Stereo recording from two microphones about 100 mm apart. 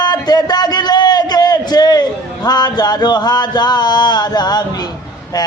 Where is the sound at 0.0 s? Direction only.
45° left (ahead or behind).